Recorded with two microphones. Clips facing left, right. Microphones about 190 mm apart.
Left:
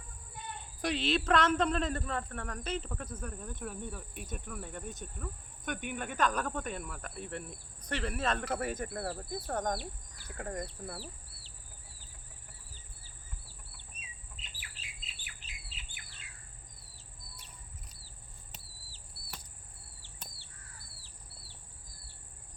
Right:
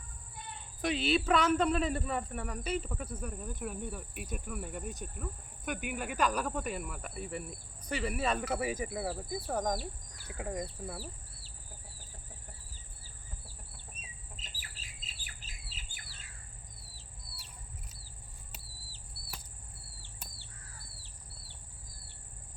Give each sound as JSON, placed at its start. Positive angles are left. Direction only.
{"t": 0.8, "sound": "speech", "side_deg": -5}
{"t": 14.3, "sound": "bird", "side_deg": -40}
{"t": 18.5, "sound": "a sound", "side_deg": -5}